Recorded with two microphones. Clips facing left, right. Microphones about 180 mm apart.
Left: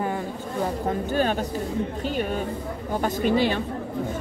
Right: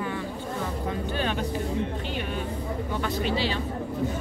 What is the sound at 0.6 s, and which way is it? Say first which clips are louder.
Speech: left 6 dB; 45° left (ahead or behind).